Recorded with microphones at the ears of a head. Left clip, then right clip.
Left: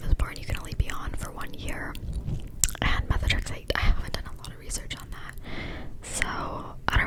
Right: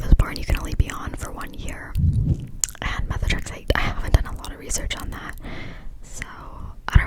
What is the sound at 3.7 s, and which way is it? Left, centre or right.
Whispering, right.